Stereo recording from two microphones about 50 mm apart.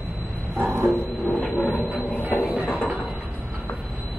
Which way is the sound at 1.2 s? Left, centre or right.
Left.